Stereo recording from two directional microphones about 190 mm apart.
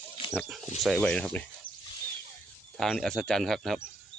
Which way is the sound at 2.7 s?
Centre (ahead or behind).